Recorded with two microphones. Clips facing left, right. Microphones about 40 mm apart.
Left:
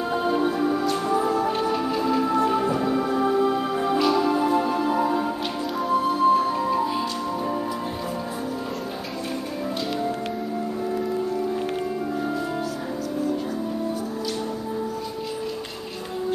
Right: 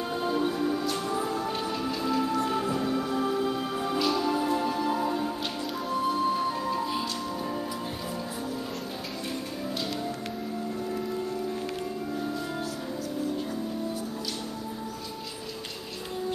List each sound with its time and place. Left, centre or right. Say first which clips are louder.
0.1 s music: left 5 dB; left
5.8 s music: left 6 dB; centre